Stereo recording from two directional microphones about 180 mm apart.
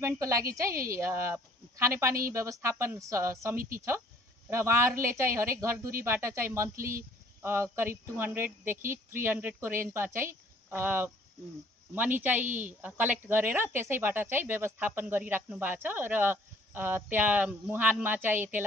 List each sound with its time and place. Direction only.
0.0 s a woman's voice: 15° right (ahead or behind)
3.5 s speech: 50° right (ahead or behind)
4.5 s a woman's voice: 15° right (ahead or behind)
12.2 s a woman's voice: 10° right (ahead or behind)